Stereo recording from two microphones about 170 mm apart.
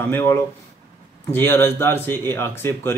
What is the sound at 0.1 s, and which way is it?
Speech, 15° left (ahead or behind).